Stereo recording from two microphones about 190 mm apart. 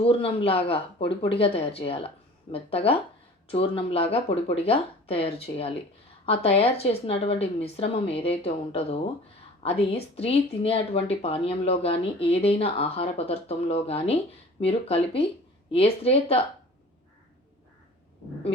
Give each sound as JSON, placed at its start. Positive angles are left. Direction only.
{"t": 0.0, "sound": "speech", "side_deg": 30}